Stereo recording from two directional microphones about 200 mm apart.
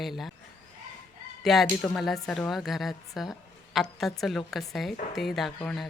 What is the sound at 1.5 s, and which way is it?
A woman's voice, centre (ahead or behind).